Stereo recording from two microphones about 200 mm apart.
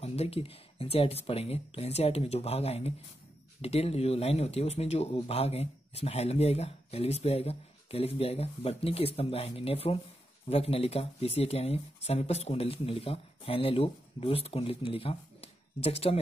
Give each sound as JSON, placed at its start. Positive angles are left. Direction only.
{"t": 0.0, "sound": "a man's voice", "side_deg": 30}